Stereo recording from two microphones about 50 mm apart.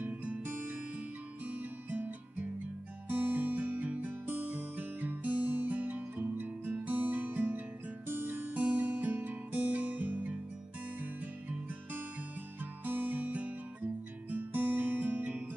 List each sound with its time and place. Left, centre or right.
0.0 s music: right
0.4 s music: right
8.5 s music: right
12.8 s music: right
14.3 s guitar: right